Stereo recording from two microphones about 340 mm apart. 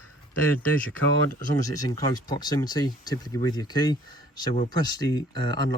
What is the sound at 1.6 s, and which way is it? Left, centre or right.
Speech, centre.